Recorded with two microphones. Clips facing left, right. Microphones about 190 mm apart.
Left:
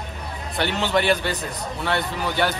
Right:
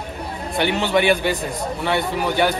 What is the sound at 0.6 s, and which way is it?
Speech, 15° right (ahead or behind).